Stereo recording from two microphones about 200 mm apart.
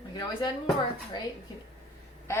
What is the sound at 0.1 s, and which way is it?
Speech, 20° left (ahead or behind).